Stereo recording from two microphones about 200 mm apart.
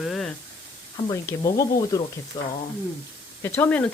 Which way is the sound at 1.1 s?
15° left (ahead or behind).